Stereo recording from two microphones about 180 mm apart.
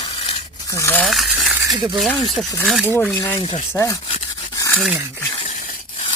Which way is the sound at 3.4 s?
30° left (ahead or behind).